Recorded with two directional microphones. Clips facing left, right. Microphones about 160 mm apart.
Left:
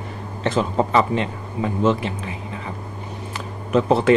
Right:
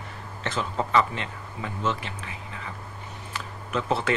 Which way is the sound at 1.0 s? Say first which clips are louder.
Left 7 dB; 20° left (ahead or behind).